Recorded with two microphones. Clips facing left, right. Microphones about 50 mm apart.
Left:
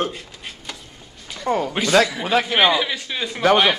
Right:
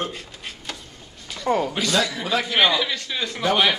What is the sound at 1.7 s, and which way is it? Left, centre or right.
Speech, left.